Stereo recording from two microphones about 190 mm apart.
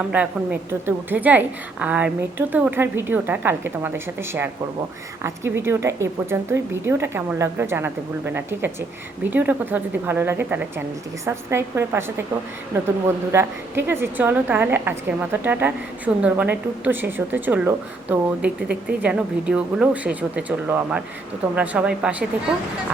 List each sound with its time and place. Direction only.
0.1 s a woman's voice: 5° right (ahead or behind)
13.3 s a woman's voice: 10° right (ahead or behind)